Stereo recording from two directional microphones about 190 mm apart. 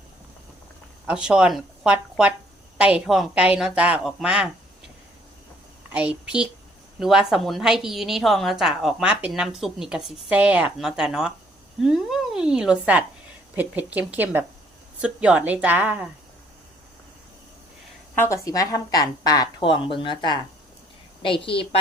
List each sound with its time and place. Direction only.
1.0 s a woman's voice: 5° right (ahead or behind)
5.9 s a woman's voice: 5° right (ahead or behind)
18.2 s speech: 15° left (ahead or behind)